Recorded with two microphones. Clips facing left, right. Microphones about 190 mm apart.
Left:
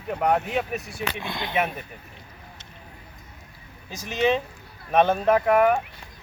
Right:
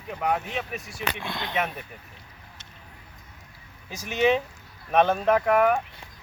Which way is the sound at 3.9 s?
10° right (ahead or behind).